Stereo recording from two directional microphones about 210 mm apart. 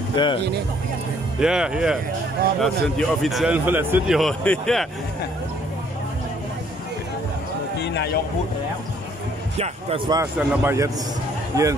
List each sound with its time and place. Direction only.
0.1 s speech: 20° left (ahead or behind)
1.4 s a man's voice: 5° right (ahead or behind)
7.8 s speech: 55° left (ahead or behind)
9.6 s speech: 25° right (ahead or behind)